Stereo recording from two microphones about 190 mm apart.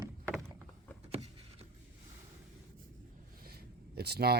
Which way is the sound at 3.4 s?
55° right (ahead or behind).